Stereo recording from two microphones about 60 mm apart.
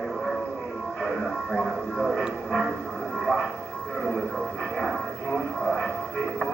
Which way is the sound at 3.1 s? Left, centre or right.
Centre.